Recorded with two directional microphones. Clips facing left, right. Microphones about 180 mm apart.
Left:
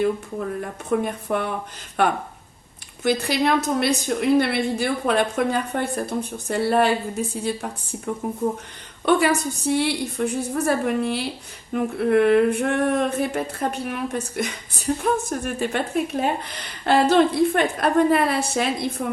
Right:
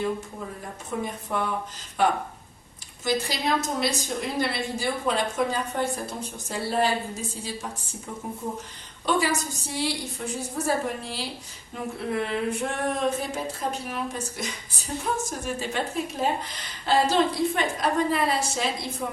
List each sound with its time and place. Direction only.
0.0 s a woman's voice: 60° left (ahead or behind)